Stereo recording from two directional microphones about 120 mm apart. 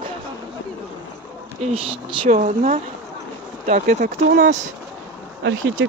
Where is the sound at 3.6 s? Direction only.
90° right.